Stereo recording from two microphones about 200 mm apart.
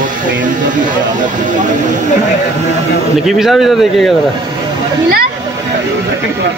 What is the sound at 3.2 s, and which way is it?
Speech, centre (ahead or behind).